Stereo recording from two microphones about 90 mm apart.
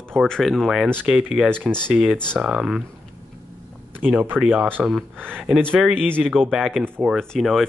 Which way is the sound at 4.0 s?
20° right (ahead or behind).